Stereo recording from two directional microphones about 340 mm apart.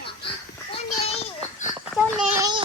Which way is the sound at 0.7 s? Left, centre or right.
Centre.